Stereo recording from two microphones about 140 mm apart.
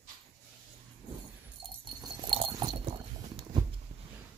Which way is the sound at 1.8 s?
35° right (ahead or behind).